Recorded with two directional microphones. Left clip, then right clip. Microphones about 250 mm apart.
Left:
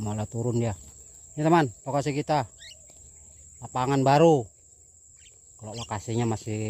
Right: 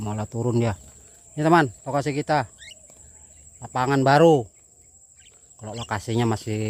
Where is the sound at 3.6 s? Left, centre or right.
Centre.